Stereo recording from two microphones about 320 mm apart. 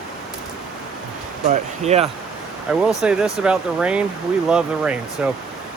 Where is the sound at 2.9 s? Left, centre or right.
Centre.